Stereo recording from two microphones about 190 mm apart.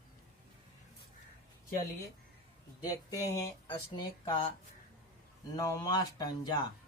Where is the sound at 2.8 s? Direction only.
20° left (ahead or behind).